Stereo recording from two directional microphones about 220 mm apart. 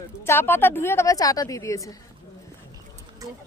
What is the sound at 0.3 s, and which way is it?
A woman's voice, 10° left (ahead or behind).